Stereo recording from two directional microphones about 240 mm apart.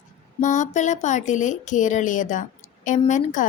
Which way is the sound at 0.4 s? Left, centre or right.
Left.